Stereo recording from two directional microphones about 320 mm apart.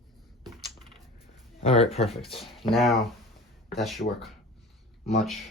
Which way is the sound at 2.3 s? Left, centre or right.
Centre.